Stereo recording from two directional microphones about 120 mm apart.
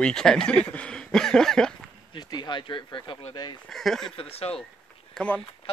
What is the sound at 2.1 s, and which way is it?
Speech, 35° left (ahead or behind).